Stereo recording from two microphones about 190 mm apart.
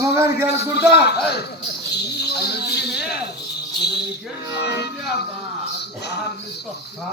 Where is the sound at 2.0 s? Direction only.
60° left (ahead or behind).